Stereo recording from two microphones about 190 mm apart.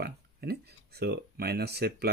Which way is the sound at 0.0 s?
55° right (ahead or behind).